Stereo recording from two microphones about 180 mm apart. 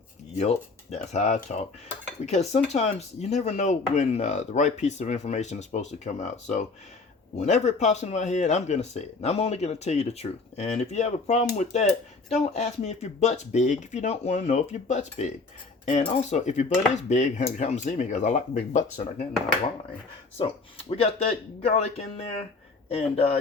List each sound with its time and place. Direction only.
0.3 s speech: 40° left (ahead or behind)
20.4 s speech: 35° left (ahead or behind)